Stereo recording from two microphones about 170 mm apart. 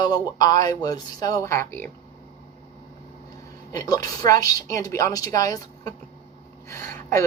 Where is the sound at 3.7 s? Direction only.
20° left (ahead or behind).